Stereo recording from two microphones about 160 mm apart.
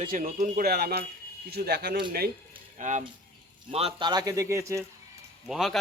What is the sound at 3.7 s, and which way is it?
Speech, 35° right (ahead or behind).